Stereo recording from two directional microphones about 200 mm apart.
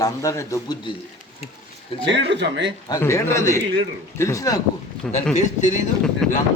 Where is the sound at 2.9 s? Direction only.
15° left (ahead or behind).